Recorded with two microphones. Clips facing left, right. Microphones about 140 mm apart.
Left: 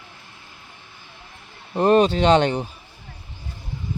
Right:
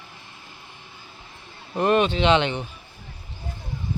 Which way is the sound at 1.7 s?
35° left (ahead or behind).